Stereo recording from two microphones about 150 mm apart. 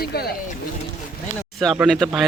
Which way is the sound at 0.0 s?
90° left.